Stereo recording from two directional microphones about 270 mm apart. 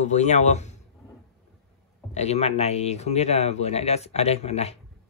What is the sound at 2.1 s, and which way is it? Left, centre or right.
Speech, left.